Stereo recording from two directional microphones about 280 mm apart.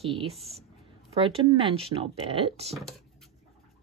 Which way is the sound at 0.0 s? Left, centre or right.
Centre.